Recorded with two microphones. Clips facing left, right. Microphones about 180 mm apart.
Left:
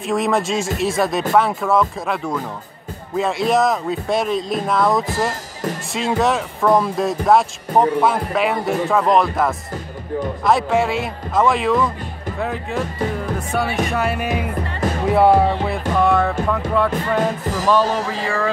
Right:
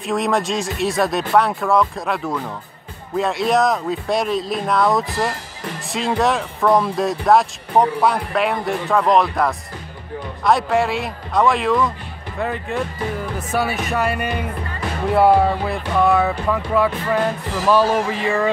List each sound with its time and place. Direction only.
0.0 s speech: centre (ahead or behind)